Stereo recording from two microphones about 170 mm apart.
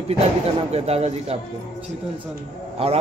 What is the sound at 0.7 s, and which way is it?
Speech, 35° right (ahead or behind).